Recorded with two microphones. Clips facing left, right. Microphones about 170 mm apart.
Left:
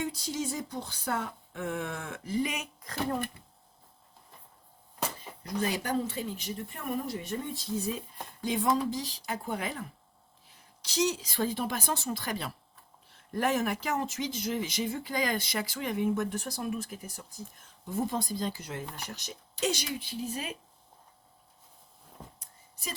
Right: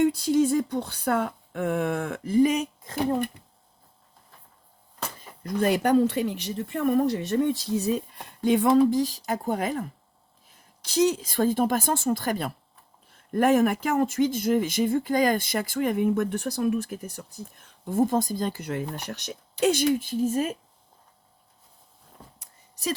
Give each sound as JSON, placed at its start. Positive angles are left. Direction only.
{"t": 0.0, "sound": "speech", "side_deg": -60}
{"t": 2.8, "sound": "speech", "side_deg": -20}
{"t": 5.4, "sound": "speech", "side_deg": -55}
{"t": 17.8, "sound": "speech", "side_deg": -50}
{"t": 22.4, "sound": "a sound", "side_deg": -80}